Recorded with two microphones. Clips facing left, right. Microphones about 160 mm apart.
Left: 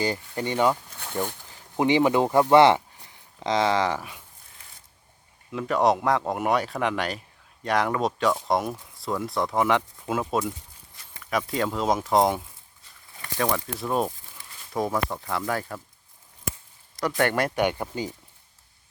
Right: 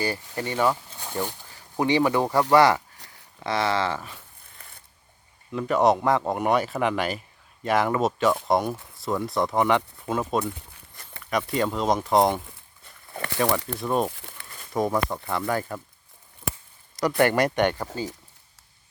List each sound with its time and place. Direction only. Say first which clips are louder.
0.0 s speech: left 1 dB; 20° left (ahead or behind)
0.9 s a sound: even; 10° right (ahead or behind)
1.5 s speech: left 2 dB; 20° left (ahead or behind)
5.5 s speech: right 2 dB; centre (ahead or behind)
10.4 s walk: even; 60° right (ahead or behind)
11.2 s speech: right 1 dB; centre (ahead or behind)
12.8 s a sound: right 11 dB; 70° right (ahead or behind)
13.7 s speech: right 1 dB; centre (ahead or behind)
14.1 s crumpling: right 5 dB; 75° right (ahead or behind)
14.7 s speech: right 2 dB; centre (ahead or behind)
17.2 s speech: right 3 dB; centre (ahead or behind); by 18.1 s 15° left (ahead or behind)